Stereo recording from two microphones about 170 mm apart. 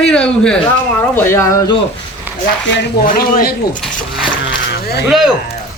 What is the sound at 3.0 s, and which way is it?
Speech, 55° left (ahead or behind).